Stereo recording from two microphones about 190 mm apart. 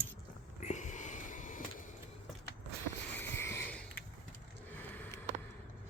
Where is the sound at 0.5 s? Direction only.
40° left (ahead or behind).